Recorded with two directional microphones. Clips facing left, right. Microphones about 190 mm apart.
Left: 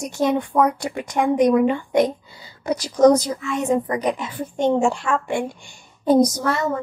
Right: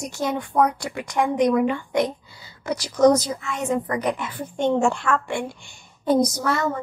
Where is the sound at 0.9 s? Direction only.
25° left (ahead or behind).